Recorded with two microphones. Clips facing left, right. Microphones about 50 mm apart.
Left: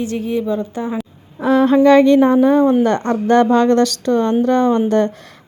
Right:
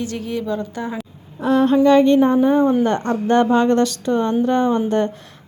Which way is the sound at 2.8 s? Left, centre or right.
Left.